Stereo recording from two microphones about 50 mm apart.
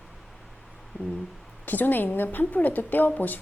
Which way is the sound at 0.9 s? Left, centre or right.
Right.